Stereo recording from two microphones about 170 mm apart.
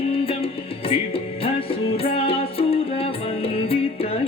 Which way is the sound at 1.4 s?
35° left (ahead or behind).